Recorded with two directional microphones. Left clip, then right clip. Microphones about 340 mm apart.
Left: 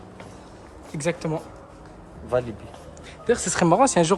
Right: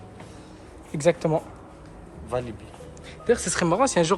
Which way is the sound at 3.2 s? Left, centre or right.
Centre.